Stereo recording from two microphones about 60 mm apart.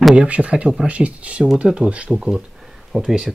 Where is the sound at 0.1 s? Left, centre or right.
Centre.